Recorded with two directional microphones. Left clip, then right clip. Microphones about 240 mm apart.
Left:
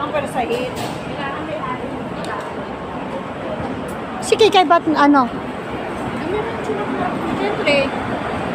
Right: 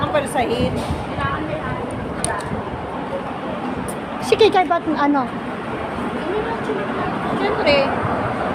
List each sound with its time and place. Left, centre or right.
4.3 s speech: centre
4.5 s speech: left
7.6 s speech: centre